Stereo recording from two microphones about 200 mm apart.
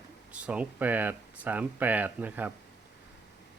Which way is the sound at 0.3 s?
5° right (ahead or behind).